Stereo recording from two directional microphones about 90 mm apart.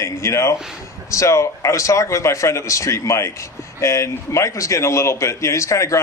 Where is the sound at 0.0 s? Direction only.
30° left (ahead or behind).